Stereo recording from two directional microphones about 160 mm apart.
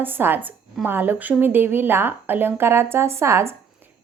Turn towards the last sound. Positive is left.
turn(degrees=-15)  # may be behind; listen again after turning